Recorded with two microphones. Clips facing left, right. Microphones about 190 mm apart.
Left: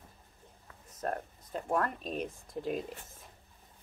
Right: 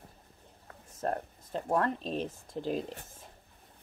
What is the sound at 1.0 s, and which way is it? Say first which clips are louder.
Speech: right 3 dB; 30° right (ahead or behind).